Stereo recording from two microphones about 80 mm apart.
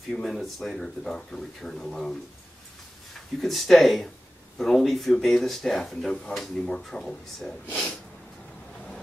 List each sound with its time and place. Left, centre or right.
0.1 s speech: centre
3.3 s speech: centre
7.6 s speech: centre